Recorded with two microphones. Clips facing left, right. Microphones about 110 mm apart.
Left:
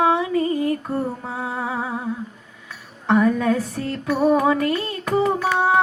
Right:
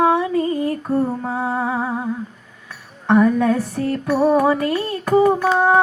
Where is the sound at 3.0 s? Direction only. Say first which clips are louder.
Right 3 dB; centre (ahead or behind).